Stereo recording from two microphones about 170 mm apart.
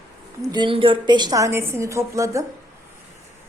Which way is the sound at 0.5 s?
30° right (ahead or behind).